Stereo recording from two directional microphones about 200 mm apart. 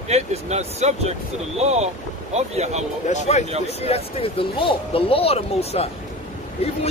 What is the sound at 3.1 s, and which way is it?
Speech, 35° left (ahead or behind).